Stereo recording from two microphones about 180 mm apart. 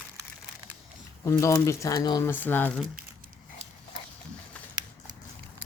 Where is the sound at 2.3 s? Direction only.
10° left (ahead or behind).